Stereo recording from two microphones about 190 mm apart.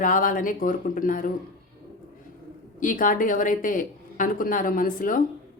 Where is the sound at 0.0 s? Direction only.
45° left (ahead or behind).